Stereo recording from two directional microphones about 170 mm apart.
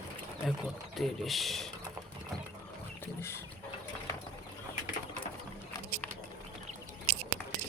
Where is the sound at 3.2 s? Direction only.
15° left (ahead or behind).